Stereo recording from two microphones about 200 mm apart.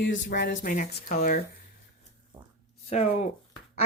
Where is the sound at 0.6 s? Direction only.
40° left (ahead or behind).